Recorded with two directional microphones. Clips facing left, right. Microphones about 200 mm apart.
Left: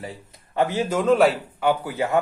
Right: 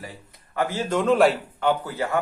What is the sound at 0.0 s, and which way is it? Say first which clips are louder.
Speech: left 4 dB; 25° left (ahead or behind).